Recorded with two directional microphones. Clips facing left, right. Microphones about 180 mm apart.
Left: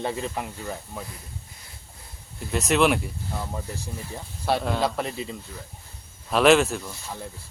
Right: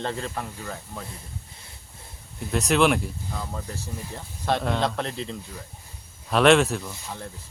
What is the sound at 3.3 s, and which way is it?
Speech, 15° left (ahead or behind).